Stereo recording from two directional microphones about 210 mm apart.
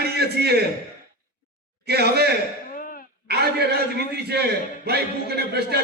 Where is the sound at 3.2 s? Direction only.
50° right (ahead or behind).